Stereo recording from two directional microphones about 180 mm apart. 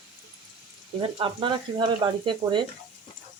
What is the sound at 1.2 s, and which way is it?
Speech, 30° right (ahead or behind).